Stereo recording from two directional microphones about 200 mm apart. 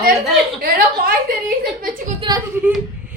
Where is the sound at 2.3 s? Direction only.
20° right (ahead or behind).